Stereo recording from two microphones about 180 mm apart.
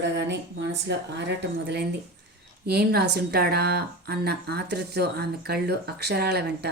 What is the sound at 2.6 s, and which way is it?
A woman's voice, 60° right (ahead or behind).